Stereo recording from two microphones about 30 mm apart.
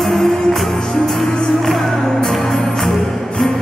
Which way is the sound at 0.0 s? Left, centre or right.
Centre.